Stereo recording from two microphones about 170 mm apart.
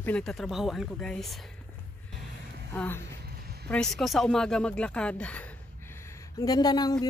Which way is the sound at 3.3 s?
65° right (ahead or behind).